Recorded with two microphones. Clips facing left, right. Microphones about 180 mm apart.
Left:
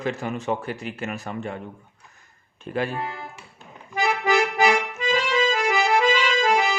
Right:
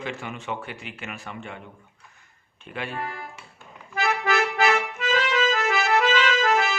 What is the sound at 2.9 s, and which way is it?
Speech, 20° left (ahead or behind).